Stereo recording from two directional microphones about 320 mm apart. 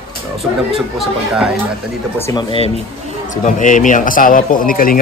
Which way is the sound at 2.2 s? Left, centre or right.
Centre.